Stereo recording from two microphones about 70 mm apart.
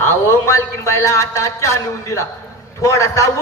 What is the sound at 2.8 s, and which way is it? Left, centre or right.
Speech, left.